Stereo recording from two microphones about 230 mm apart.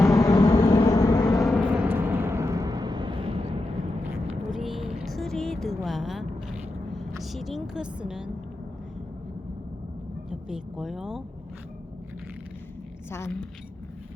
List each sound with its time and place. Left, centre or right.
0.0 s vehicle: centre
1.5 s vehicle: centre; by 3.4 s right
4.0 s vehicle: centre
10.2 s speech: centre
13.1 s a woman's voice: centre